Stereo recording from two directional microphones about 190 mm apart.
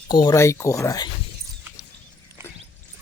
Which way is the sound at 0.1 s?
20° left (ahead or behind).